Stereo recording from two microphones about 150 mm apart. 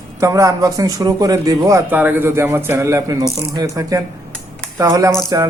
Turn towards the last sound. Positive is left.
turn(degrees=-20)  # may be behind; listen again after turning